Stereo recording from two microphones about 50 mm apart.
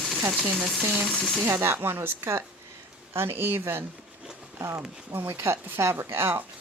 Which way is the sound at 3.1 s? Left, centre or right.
Right.